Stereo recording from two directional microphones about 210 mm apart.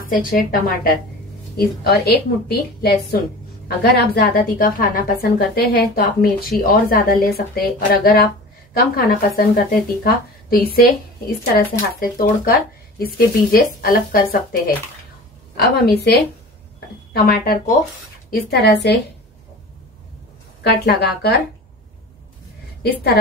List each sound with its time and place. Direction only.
0.0 s speech: 40° left (ahead or behind)
20.6 s speech: 50° left (ahead or behind)